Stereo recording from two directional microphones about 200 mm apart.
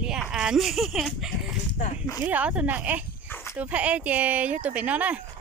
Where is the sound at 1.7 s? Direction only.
35° left (ahead or behind).